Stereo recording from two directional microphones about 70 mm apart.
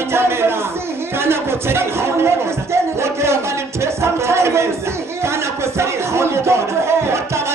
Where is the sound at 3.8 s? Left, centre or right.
Right.